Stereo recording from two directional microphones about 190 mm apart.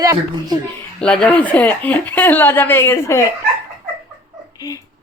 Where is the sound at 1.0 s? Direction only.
5° left (ahead or behind).